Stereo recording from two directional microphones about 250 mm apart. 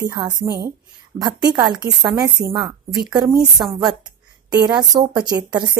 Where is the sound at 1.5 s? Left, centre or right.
Centre.